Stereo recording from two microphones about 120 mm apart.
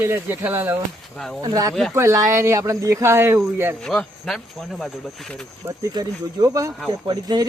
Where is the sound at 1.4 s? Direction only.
30° right (ahead or behind).